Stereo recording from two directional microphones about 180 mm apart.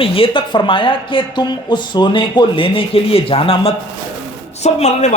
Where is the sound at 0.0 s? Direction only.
30° left (ahead or behind).